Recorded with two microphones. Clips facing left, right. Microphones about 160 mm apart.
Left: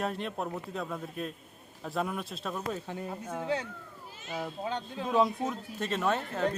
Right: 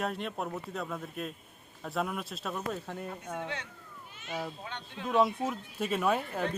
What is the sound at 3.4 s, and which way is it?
Speech, 35° left (ahead or behind).